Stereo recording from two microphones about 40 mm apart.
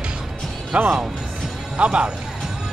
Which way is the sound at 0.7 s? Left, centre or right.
Right.